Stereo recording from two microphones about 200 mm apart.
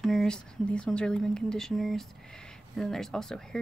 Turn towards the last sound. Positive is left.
turn(degrees=5)  # may be behind; listen again after turning